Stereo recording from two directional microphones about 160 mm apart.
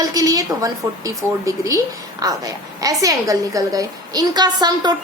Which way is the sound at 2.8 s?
20° right (ahead or behind).